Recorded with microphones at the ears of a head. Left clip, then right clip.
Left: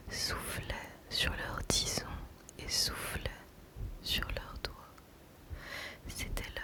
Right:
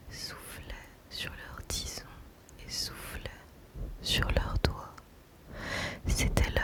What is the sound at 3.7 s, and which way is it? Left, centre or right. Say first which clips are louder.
Whispering: right 5 dB; right.